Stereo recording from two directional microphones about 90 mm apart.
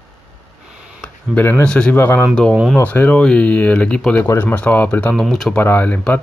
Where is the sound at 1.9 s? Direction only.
25° left (ahead or behind).